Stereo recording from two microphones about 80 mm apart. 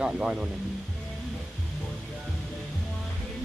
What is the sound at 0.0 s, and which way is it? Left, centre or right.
Speech, centre.